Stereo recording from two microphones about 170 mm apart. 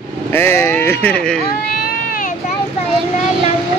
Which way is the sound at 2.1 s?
55° left (ahead or behind).